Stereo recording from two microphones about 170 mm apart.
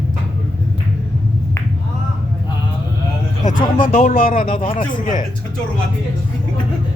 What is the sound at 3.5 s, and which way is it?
Speech, 55° left (ahead or behind).